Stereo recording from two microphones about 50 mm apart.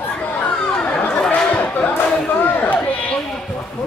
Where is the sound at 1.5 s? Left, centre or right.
Left.